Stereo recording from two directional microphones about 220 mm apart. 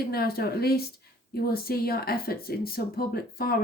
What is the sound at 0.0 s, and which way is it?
A woman's voice, 45° left (ahead or behind).